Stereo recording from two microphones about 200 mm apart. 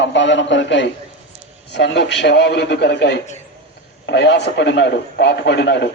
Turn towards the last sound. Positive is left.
turn(degrees=60)  # may be behind; listen again after turning